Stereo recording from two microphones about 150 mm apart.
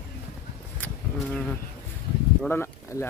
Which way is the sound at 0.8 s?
10° left (ahead or behind).